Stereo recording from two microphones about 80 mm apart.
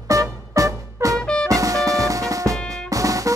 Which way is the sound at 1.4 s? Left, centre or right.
Right.